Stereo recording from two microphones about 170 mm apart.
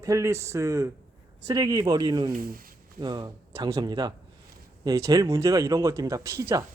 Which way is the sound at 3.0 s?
25° right (ahead or behind).